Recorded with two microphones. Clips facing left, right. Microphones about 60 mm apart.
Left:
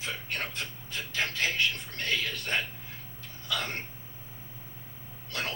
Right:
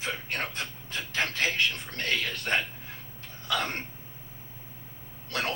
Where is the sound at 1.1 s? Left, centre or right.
Right.